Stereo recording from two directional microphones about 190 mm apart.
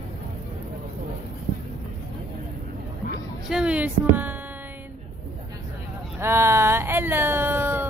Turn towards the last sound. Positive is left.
turn(degrees=-10)  # may be behind; listen again after turning